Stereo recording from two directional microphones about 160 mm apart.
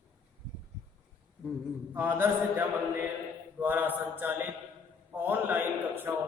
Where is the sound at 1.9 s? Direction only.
15° right (ahead or behind).